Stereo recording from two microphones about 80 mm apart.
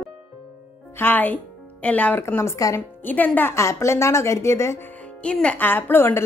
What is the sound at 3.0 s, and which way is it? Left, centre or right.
Speech, left.